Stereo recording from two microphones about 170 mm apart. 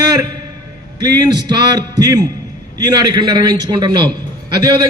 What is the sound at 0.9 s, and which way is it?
A man's voice, 25° right (ahead or behind).